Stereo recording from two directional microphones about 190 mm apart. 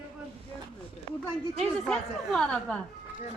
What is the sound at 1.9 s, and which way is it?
Speech, 5° left (ahead or behind).